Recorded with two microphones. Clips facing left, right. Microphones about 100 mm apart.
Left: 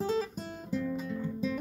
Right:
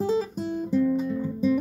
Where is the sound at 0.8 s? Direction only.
35° right (ahead or behind).